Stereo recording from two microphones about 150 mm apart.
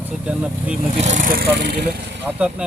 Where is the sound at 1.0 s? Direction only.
55° right (ahead or behind); by 1.9 s 90° right.